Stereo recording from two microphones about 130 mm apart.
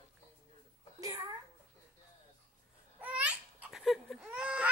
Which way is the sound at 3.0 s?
10° right (ahead or behind).